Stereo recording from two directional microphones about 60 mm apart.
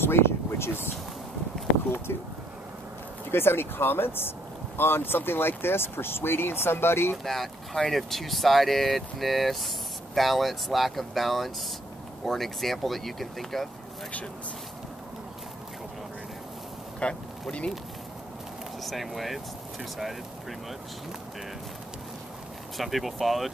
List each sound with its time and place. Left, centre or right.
0.0 s speech: left
3.3 s speech: left
7.2 s speech: centre
17.0 s speech: centre
18.8 s speech: centre
22.8 s speech: centre